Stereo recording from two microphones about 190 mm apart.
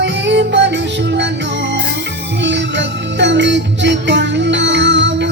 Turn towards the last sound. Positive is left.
turn(degrees=-65)  # may be behind; listen again after turning